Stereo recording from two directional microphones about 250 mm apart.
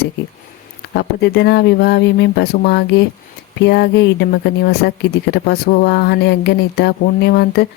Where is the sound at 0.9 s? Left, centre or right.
Left.